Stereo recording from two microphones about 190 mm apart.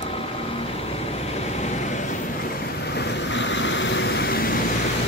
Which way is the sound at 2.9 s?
65° left (ahead or behind).